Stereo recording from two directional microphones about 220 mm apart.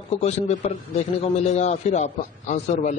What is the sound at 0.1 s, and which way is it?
A man's voice, 30° left (ahead or behind).